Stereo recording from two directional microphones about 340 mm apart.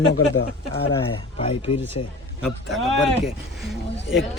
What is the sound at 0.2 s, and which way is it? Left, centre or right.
Speech, left.